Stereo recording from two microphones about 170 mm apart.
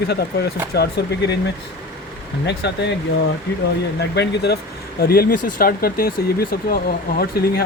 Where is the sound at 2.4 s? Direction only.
90° left.